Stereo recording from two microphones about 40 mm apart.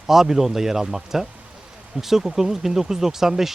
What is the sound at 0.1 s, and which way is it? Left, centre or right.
Speech, centre.